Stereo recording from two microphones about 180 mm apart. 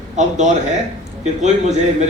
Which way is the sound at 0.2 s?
40° right (ahead or behind).